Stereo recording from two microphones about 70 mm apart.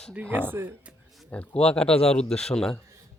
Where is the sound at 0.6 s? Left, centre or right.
Right.